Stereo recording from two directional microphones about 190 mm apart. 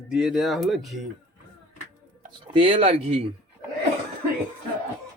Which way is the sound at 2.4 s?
25° right (ahead or behind).